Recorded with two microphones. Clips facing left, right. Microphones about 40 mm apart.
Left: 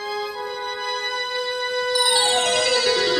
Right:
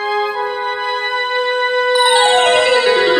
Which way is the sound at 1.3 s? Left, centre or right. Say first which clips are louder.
Right 11 dB; right.